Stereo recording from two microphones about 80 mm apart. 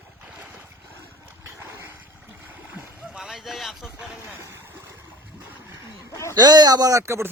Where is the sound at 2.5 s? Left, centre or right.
Centre.